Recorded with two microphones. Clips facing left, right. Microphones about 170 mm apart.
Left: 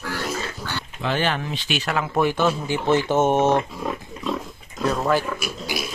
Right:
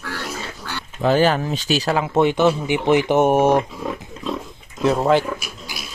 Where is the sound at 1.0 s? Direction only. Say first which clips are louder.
Right 8 dB; 40° right (ahead or behind).